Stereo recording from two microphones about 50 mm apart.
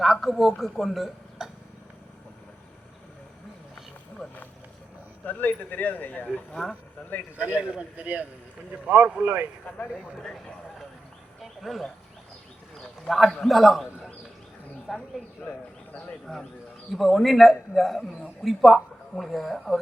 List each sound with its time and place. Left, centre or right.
0.0 s speech: centre
4.2 s a sound: centre
5.2 s speech: left
6.5 s speech: centre
7.3 s a man's voice: right
9.2 s a man's voice: right
9.7 s speech: left
11.3 s a sound: centre
13.5 s speech: centre
16.9 s speech: centre